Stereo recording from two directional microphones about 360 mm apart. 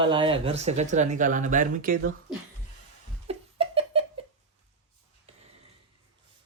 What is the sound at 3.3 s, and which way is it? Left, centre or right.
Giggle, centre.